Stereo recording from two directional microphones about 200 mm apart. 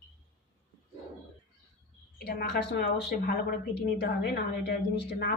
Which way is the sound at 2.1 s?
50° left (ahead or behind).